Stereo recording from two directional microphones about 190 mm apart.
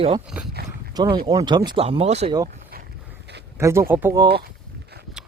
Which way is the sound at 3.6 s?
15° right (ahead or behind).